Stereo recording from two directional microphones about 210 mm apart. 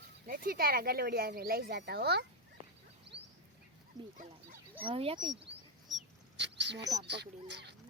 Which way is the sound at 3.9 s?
20° right (ahead or behind).